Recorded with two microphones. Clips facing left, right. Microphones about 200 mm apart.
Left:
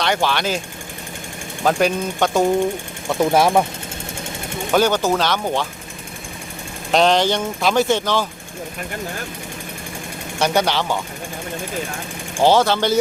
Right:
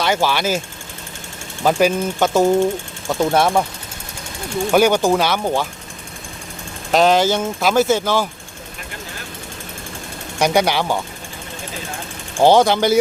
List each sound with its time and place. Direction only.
0.0 s speech: 5° right (ahead or behind)
1.6 s speech: 5° right (ahead or behind)
4.7 s speech: 10° right (ahead or behind)
6.9 s speech: 5° right (ahead or behind)
10.4 s speech: 10° right (ahead or behind)
12.4 s speech: 15° right (ahead or behind)